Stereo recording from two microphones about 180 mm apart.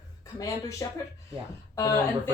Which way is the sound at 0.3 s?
15° left (ahead or behind).